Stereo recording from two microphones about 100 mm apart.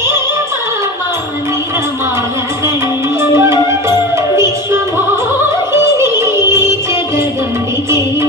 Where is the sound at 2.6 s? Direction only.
25° right (ahead or behind).